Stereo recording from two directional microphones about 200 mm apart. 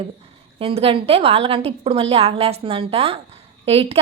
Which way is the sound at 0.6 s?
30° right (ahead or behind).